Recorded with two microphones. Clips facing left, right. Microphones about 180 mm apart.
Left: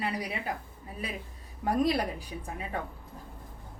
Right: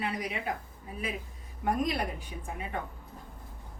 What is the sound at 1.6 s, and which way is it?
Speech, 35° left (ahead or behind).